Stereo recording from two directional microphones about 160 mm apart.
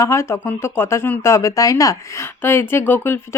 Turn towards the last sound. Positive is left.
turn(degrees=15)  # may be behind; listen again after turning